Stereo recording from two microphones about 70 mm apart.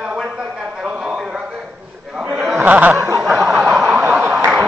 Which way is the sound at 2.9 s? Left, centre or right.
Right.